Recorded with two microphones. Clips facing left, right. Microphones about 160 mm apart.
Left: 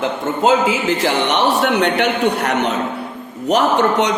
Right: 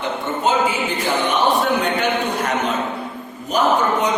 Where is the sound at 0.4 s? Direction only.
90° left.